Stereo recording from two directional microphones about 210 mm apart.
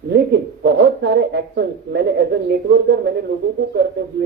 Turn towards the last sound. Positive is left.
turn(degrees=-55)  # may be behind; listen again after turning